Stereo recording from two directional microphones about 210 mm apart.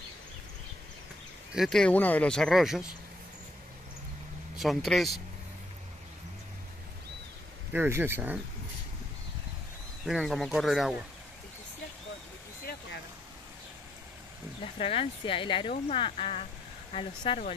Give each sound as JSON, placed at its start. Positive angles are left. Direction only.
{"t": 1.5, "sound": "speech", "side_deg": 0}
{"t": 4.6, "sound": "speech", "side_deg": 0}
{"t": 7.7, "sound": "speech", "side_deg": -10}
{"t": 10.0, "sound": "speech", "side_deg": 0}
{"t": 14.6, "sound": "speech", "side_deg": 25}